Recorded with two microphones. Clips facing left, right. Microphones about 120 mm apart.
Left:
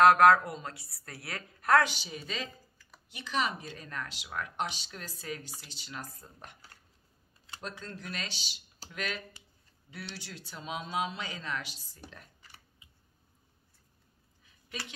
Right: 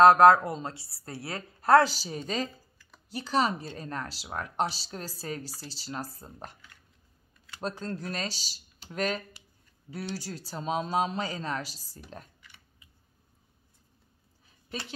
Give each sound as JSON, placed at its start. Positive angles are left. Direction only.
{"t": 0.0, "sound": "a woman's voice", "side_deg": -25}
{"t": 7.6, "sound": "speech", "side_deg": -40}
{"t": 12.4, "sound": "scissors", "side_deg": 35}
{"t": 14.4, "sound": "a sound", "side_deg": -35}